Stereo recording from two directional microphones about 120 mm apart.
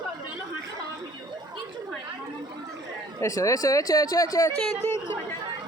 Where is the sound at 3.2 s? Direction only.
25° left (ahead or behind).